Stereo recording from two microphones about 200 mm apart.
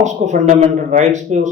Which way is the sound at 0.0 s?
35° right (ahead or behind).